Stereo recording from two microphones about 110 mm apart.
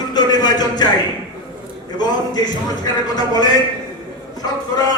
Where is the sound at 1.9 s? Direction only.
40° left (ahead or behind).